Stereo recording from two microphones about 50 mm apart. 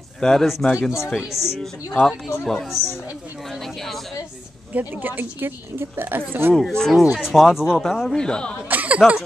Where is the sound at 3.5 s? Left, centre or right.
Centre.